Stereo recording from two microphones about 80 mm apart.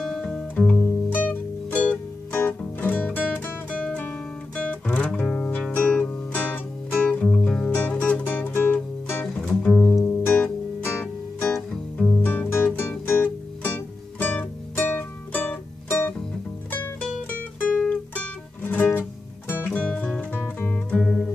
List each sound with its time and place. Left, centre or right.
0.0 s music: centre
0.7 s music: left
11.7 s music: centre
12.2 s music: left
17.8 s music: left
21.0 s music: centre